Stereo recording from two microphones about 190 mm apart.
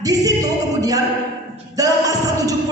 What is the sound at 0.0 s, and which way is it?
Music, 20° right (ahead or behind).